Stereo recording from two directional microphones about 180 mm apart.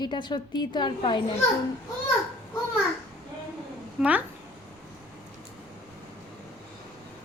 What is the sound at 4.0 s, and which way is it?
Speech, 5° right (ahead or behind).